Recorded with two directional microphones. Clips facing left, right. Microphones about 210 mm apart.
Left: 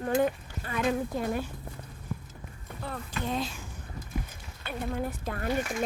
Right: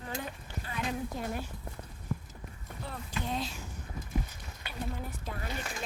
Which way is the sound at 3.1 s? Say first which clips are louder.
Left 3 dB; 50° left (ahead or behind).